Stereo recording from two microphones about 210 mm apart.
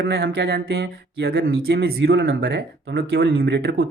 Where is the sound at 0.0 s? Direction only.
50° right (ahead or behind).